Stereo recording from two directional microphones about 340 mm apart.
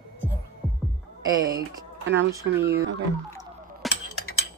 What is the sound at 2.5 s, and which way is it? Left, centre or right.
Speech, centre.